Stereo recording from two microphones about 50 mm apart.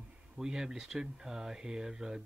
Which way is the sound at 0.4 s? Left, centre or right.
Centre.